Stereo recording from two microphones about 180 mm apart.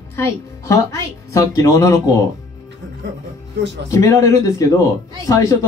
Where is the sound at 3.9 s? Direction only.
15° left (ahead or behind).